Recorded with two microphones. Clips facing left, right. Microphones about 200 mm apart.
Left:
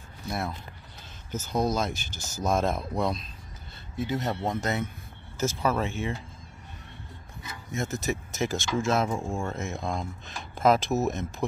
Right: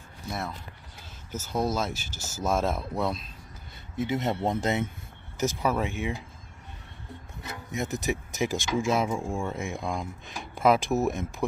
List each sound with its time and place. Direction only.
1.3 s speech: 5° right (ahead or behind)
3.9 s speech: 20° right (ahead or behind)
5.4 s speech: 10° right (ahead or behind)
7.7 s speech: 15° right (ahead or behind)
9.1 s speech: centre (ahead or behind)
9.4 s speech: 10° right (ahead or behind)